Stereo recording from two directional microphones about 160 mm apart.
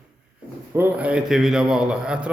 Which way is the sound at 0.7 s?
10° right (ahead or behind).